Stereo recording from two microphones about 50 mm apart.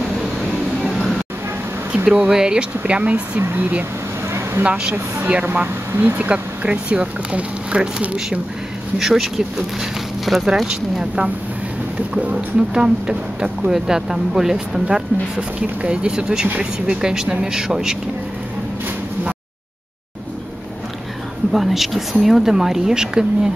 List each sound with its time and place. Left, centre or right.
2.1 s speech: centre
2.8 s speech: right
5.4 s speech: right
6.3 s speech: right
8.9 s speech: centre
12.2 s speech: right
12.7 s speech: centre
21.5 s speech: centre